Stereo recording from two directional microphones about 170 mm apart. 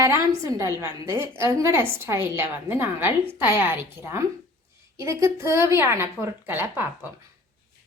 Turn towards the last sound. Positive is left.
turn(degrees=-15)  # may be behind; listen again after turning